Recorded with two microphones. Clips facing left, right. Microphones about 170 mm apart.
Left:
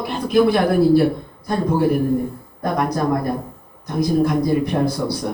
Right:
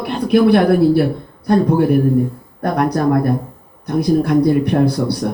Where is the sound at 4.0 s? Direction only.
65° right (ahead or behind).